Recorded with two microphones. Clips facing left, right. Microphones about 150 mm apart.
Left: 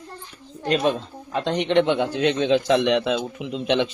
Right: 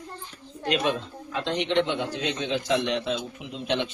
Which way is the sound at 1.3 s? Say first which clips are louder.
Left 5 dB; 45° left (ahead or behind).